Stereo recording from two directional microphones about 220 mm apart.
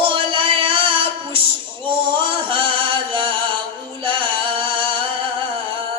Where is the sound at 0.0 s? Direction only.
25° right (ahead or behind).